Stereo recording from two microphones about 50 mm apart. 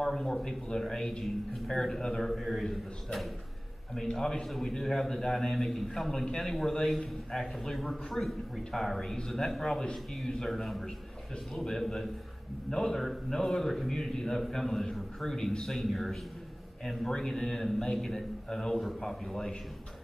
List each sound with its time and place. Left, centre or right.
0.0 s a man's voice: centre